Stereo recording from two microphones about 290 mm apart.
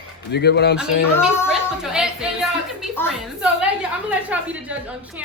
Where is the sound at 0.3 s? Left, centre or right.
Left.